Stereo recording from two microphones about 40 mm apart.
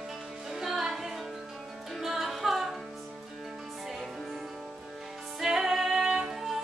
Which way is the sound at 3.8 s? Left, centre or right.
Centre.